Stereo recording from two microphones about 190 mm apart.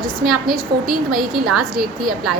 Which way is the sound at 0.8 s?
Centre (ahead or behind).